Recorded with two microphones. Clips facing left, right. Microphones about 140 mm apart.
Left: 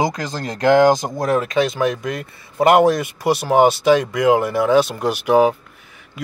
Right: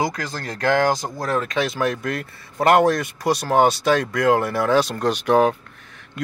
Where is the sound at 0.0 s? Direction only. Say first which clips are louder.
Left 3 dB; 20° left (ahead or behind).